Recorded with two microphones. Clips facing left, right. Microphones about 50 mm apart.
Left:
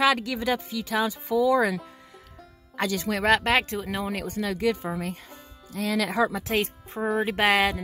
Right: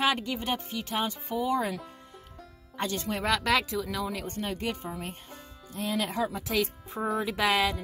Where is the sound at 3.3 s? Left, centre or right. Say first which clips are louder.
Left 2 dB; left.